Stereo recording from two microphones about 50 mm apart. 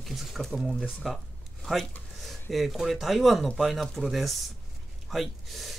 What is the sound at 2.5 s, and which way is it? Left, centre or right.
Speech, centre.